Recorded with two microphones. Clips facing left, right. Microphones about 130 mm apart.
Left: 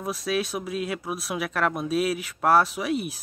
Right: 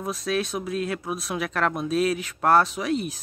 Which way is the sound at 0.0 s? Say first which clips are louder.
Right 1 dB; 10° left (ahead or behind).